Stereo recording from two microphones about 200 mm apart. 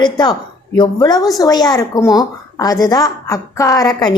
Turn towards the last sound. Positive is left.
turn(degrees=20)  # may be behind; listen again after turning